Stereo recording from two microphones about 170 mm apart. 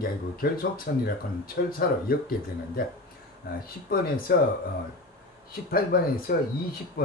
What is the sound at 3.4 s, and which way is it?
Speech, 60° left (ahead or behind).